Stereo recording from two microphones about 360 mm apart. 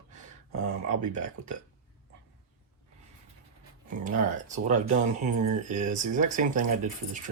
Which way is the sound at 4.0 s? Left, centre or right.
Right.